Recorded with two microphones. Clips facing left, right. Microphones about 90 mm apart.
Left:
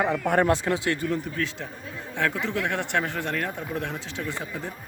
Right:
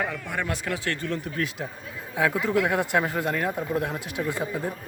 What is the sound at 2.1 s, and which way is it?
Speech, 10° right (ahead or behind).